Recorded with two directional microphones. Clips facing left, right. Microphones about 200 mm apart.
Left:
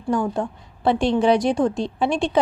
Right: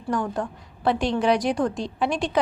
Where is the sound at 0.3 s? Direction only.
25° left (ahead or behind).